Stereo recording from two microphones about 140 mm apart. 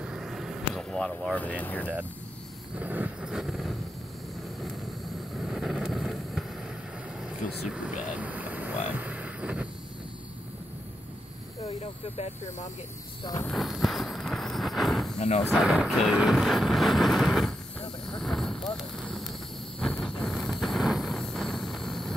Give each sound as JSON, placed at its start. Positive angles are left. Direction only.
{"t": 0.0, "sound": "vehicle", "side_deg": -5}
{"t": 1.6, "sound": "speech", "side_deg": 10}
{"t": 2.8, "sound": "vehicle", "side_deg": -10}
{"t": 5.4, "sound": "vehicle", "side_deg": -5}
{"t": 7.2, "sound": "a sound", "side_deg": -5}
{"t": 8.9, "sound": "vehicle", "side_deg": -10}
{"t": 11.6, "sound": "speech", "side_deg": 50}
{"t": 13.5, "sound": "walk", "side_deg": 0}
{"t": 15.1, "sound": "speech", "side_deg": 50}
{"t": 15.5, "sound": "vehicle", "side_deg": 0}